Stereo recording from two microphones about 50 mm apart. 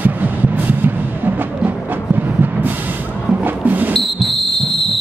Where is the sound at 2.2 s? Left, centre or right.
Right.